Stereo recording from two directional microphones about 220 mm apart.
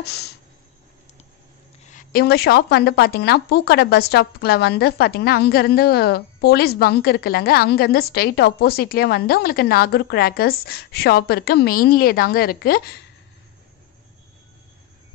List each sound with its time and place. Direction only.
0.0 s a woman's voice: 45° left (ahead or behind)
1.8 s a woman's voice: 35° left (ahead or behind)